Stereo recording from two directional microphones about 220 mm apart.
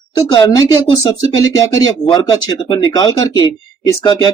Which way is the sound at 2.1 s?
20° left (ahead or behind).